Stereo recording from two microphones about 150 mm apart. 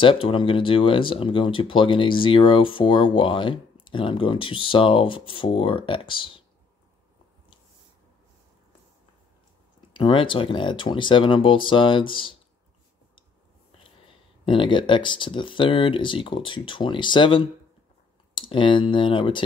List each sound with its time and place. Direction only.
0.0 s speech: 35° left (ahead or behind)
9.9 s speech: 35° left (ahead or behind)
14.4 s speech: 35° left (ahead or behind)